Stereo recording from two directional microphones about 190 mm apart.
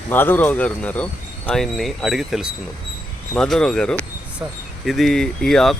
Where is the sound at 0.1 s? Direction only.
10° left (ahead or behind).